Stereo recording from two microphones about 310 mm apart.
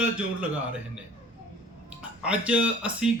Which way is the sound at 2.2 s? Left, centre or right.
Centre.